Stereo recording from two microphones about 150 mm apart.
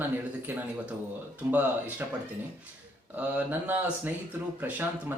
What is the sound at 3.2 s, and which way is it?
Speech, 10° right (ahead or behind).